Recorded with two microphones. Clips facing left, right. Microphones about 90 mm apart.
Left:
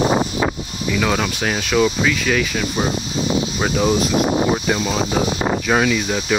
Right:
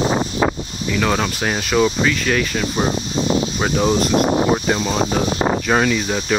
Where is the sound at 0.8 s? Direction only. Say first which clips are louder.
Even; centre (ahead or behind).